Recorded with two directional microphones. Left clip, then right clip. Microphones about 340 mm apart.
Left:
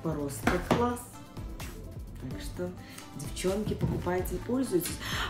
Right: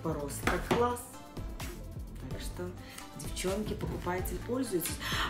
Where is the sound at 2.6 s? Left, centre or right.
Centre.